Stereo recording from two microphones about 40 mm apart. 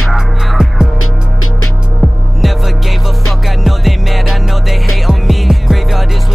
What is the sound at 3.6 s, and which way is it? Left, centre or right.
Music, centre.